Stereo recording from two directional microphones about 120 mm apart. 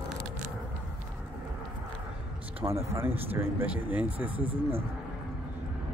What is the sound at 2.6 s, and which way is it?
Speech, 25° right (ahead or behind).